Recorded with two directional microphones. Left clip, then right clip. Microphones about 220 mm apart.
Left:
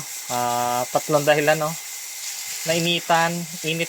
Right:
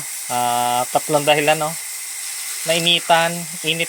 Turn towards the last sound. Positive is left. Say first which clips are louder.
# right 4 dB
turn(degrees=5)  # may be behind; listen again after turning